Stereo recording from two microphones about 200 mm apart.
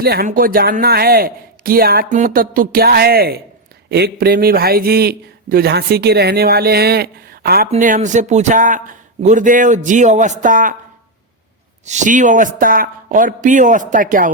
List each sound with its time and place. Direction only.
0.0 s a man's voice: 50° right (ahead or behind)
11.9 s a man's voice: 40° right (ahead or behind)